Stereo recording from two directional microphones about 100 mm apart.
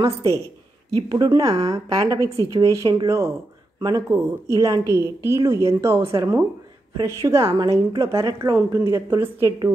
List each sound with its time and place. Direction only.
0.0 s a woman's voice: 30° right (ahead or behind)